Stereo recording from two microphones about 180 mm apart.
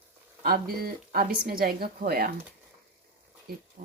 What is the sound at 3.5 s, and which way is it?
Speech, 55° right (ahead or behind).